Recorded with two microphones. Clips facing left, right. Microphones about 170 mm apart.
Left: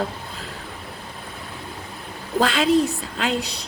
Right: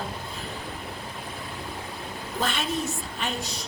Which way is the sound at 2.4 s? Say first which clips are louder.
Left 10 dB; 90° left.